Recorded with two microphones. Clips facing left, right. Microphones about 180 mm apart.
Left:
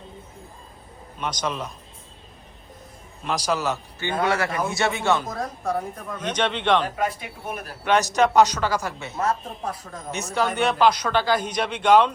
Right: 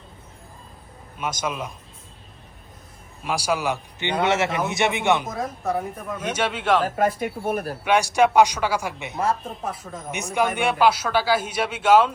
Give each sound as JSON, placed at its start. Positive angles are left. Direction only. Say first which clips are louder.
{"t": 1.2, "sound": "speech", "louder": "even", "side_deg": -10}
{"t": 3.2, "sound": "speech", "louder": "right 1 dB", "side_deg": -10}
{"t": 4.2, "sound": "a man's voice", "louder": "right 2 dB", "side_deg": -25}
{"t": 5.3, "sound": "speech", "louder": "right 1 dB", "side_deg": 0}
{"t": 6.9, "sound": "speech", "louder": "right 5 dB", "side_deg": -50}
{"t": 7.9, "sound": "speech", "louder": "right 1 dB", "side_deg": -10}
{"t": 9.6, "sound": "speech", "louder": "even", "side_deg": 0}
{"t": 10.1, "sound": "speech", "louder": "right 1 dB", "side_deg": -15}